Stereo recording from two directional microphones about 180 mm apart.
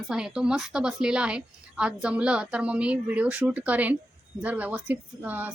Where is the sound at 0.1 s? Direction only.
5° right (ahead or behind).